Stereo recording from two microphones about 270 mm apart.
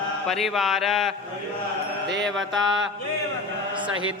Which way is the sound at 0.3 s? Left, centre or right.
Centre.